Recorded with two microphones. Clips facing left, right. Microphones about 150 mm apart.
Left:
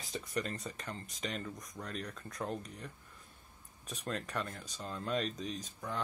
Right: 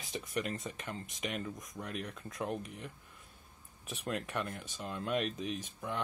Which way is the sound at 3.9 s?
5° right (ahead or behind).